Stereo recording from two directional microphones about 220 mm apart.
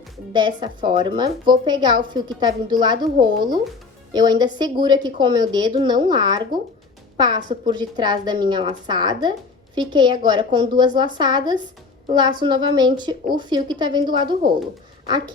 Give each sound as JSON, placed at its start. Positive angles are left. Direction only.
{"t": 0.3, "sound": "a woman's voice", "side_deg": -20}